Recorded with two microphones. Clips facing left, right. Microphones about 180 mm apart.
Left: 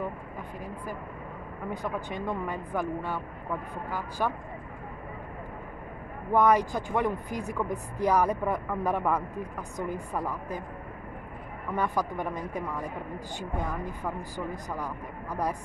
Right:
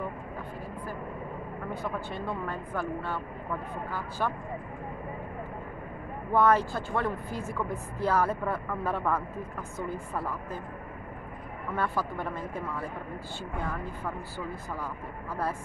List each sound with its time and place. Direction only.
1.7 s speech: 15° left (ahead or behind)
6.3 s speech: 15° left (ahead or behind)
11.7 s speech: 15° left (ahead or behind)